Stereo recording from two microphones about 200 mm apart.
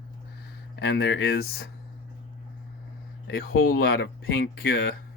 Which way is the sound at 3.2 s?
50° left (ahead or behind).